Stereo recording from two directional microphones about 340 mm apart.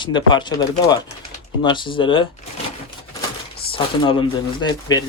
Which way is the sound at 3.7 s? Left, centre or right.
Centre.